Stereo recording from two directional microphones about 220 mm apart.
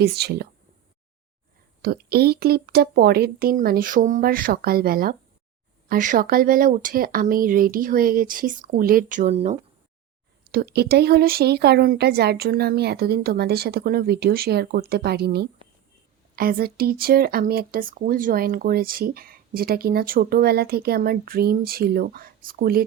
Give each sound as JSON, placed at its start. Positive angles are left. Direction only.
{"t": 0.0, "sound": "speech", "side_deg": -45}
{"t": 1.8, "sound": "speech", "side_deg": -45}
{"t": 10.5, "sound": "speech", "side_deg": -45}